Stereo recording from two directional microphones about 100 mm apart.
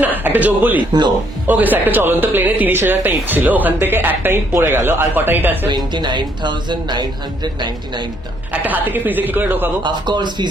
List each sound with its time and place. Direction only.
0.0 s a man's voice: 15° right (ahead or behind)
5.6 s speech: 50° right (ahead or behind)
8.6 s a woman's voice: 15° right (ahead or behind)
9.8 s speech: 50° right (ahead or behind)